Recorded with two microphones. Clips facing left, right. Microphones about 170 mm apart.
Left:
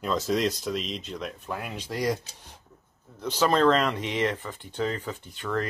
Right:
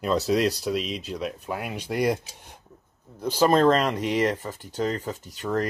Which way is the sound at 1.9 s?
60° right (ahead or behind).